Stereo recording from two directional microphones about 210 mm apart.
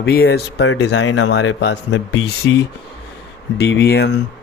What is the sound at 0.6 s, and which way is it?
Speech, 85° left.